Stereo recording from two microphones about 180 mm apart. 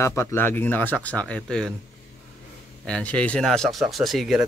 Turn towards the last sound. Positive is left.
turn(degrees=0)  # may be behind; listen again after turning